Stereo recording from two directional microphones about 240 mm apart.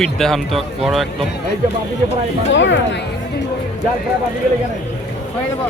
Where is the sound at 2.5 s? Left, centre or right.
Left.